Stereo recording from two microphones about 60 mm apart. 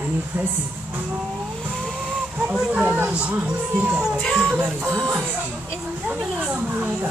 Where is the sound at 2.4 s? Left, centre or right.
Centre.